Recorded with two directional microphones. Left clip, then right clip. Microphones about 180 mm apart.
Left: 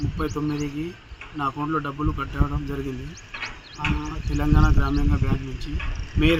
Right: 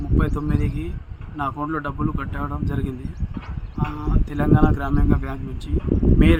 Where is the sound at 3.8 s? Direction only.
20° right (ahead or behind).